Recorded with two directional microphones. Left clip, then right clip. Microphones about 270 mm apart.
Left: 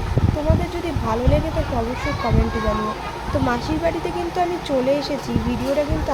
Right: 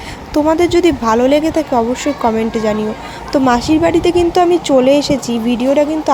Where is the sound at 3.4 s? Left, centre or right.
Right.